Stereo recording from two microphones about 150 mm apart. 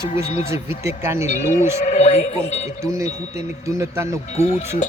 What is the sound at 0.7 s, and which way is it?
Speech, 15° right (ahead or behind).